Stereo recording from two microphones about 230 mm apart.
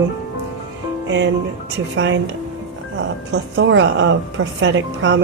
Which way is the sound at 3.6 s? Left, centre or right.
Right.